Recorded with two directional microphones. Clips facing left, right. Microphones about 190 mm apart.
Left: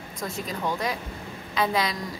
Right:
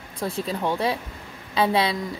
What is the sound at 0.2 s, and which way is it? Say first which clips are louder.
A woman's voice: right 4 dB; 30° right (ahead or behind).